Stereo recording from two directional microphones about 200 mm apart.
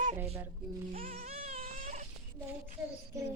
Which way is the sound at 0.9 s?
45° right (ahead or behind).